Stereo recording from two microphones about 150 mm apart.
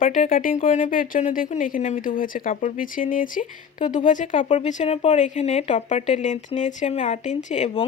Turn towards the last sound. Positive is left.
turn(degrees=50)  # may be behind; listen again after turning